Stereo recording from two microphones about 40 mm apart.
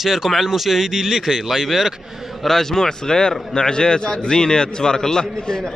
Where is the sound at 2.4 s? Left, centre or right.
Centre.